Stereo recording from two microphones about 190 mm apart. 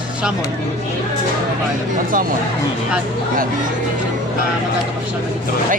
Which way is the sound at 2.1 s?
45° right (ahead or behind).